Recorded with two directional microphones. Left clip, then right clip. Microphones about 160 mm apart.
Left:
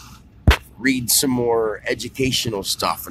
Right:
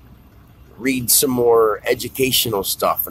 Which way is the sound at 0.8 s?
10° right (ahead or behind).